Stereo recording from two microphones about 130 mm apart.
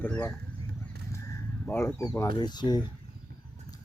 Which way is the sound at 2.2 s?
35° left (ahead or behind).